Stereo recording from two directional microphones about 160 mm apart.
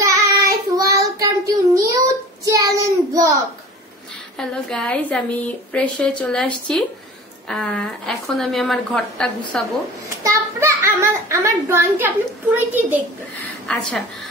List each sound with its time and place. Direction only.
0.0 s child singing: 20° right (ahead or behind)
4.4 s a woman's voice: 5° left (ahead or behind)
10.0 s a child's voice: 20° right (ahead or behind)